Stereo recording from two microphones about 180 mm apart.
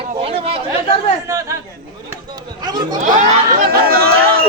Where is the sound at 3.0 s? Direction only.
45° right (ahead or behind).